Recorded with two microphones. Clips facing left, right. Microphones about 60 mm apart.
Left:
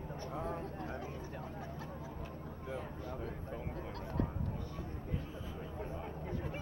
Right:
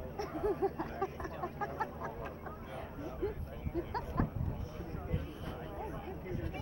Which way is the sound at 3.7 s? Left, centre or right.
Right.